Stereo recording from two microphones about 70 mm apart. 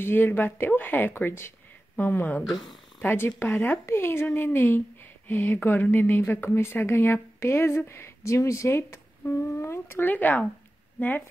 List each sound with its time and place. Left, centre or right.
0.0 s a woman's voice: left